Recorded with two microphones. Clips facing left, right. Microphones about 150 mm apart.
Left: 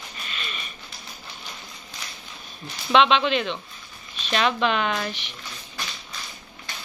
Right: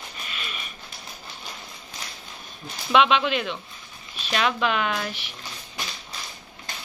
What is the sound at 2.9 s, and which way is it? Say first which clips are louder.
Speech: left 1 dB; 5° right (ahead or behind).